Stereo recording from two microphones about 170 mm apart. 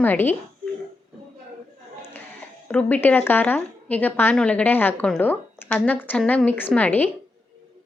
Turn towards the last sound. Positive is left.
turn(degrees=10)  # may be behind; listen again after turning